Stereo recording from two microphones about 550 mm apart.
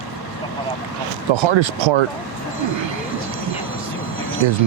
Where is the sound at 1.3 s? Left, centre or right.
Right.